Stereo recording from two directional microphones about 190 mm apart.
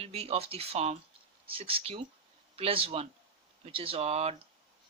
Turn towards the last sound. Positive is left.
turn(degrees=-30)  # may be behind; listen again after turning